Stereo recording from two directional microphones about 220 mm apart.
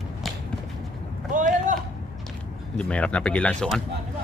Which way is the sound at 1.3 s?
35° right (ahead or behind).